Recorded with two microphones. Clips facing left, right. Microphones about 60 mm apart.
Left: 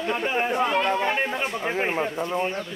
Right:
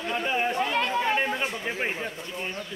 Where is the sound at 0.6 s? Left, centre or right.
Left.